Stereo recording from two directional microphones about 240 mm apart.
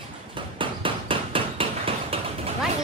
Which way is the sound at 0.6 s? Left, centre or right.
Right.